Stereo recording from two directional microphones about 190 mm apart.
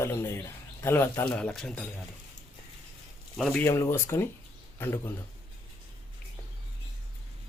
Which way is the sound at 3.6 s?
15° left (ahead or behind).